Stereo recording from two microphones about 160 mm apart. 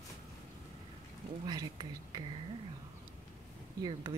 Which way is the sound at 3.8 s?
30° right (ahead or behind).